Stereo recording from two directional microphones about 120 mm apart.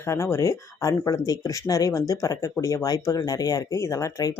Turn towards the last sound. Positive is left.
turn(degrees=25)  # may be behind; listen again after turning